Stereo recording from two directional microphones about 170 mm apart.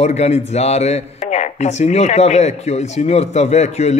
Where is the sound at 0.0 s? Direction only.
40° left (ahead or behind).